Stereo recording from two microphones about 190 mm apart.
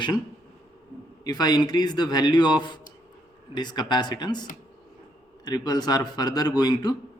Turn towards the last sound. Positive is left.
turn(degrees=20)  # may be behind; listen again after turning